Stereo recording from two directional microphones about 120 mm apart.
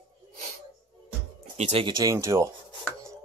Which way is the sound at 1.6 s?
60° right (ahead or behind).